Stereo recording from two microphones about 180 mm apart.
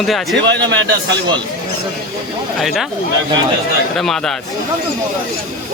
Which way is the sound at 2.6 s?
Centre (ahead or behind).